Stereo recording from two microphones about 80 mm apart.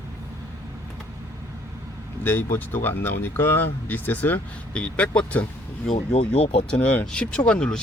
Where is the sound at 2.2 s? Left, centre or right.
Left.